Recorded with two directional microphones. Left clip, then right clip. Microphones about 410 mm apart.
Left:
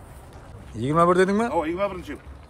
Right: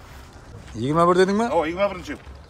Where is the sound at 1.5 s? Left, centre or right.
Right.